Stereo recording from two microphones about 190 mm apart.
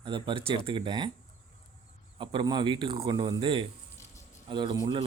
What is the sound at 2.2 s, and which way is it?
Speech, 25° right (ahead or behind).